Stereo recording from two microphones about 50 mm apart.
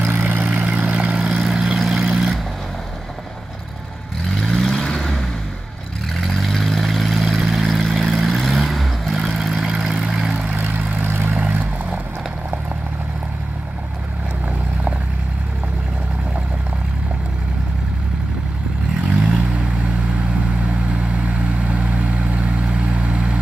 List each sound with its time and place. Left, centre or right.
0.2 s vehicle: right
1.1 s vehicle: centre
4.4 s vehicle: centre
6.1 s vehicle: centre
10.5 s vehicle: right
10.8 s vehicle: right
11.1 s vehicle: right
11.3 s vehicle: right
19.1 s vehicle: centre
20.6 s vehicle: right